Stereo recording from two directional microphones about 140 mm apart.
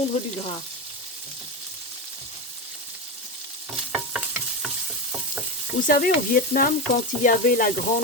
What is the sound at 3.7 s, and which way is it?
Stir, 5° right (ahead or behind).